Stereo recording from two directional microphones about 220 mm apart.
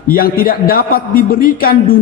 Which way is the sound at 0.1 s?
40° left (ahead or behind).